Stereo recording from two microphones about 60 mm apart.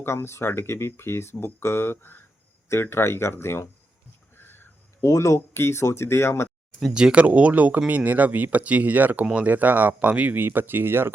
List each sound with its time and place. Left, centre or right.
0.0 s speech: left
4.4 s a sound: left
4.9 s speech: left
6.9 s speech: centre
10.3 s speech: right